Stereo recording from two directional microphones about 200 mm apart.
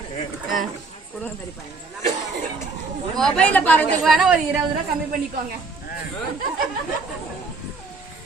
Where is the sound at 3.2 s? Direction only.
5° left (ahead or behind).